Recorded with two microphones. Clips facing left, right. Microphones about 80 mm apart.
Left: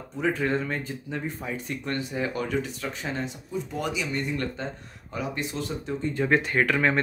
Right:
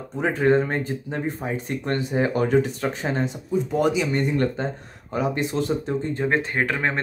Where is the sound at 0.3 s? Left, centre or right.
Right.